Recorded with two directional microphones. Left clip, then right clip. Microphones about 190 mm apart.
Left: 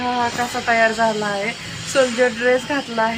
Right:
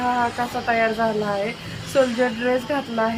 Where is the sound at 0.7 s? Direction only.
20° left (ahead or behind).